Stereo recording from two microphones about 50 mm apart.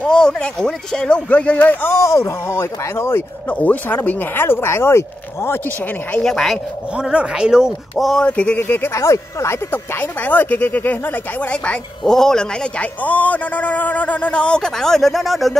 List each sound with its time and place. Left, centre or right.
0.0 s speech: centre
1.3 s speech: left
1.9 s speech: left
3.4 s a man's voice: left
4.4 s speech: left
6.2 s speech: centre
7.0 s speech: centre
8.3 s a man's voice: left
8.6 s speech: left
8.9 s speech: left
9.7 s speech: left
11.4 s a man's voice: left
12.0 s speech: centre
12.7 s a man's voice: left; by 15.5 s centre